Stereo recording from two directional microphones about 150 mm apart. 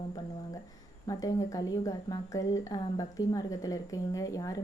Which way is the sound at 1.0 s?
25° left (ahead or behind).